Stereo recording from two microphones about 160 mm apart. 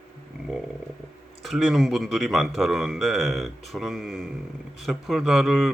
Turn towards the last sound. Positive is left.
turn(degrees=0)  # may be behind; listen again after turning